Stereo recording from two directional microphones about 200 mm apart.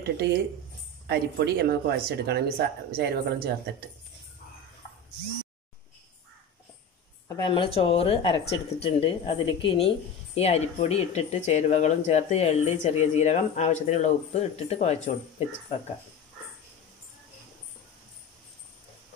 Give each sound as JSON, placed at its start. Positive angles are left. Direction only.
{"t": 0.0, "sound": "speech", "side_deg": -55}
{"t": 7.2, "sound": "a woman's voice", "side_deg": 20}